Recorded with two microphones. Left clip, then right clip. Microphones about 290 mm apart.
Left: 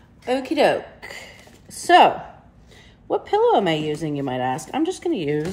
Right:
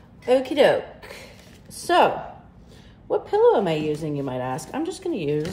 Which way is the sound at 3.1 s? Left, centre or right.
Left.